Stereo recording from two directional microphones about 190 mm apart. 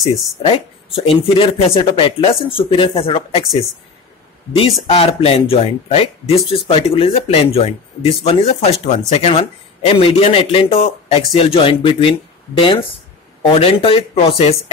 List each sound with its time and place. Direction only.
0.0 s speech: centre (ahead or behind)
0.4 s speech: 30° left (ahead or behind)
4.8 s speech: 30° left (ahead or behind)